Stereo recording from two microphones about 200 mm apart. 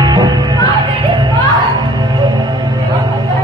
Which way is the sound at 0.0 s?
20° right (ahead or behind).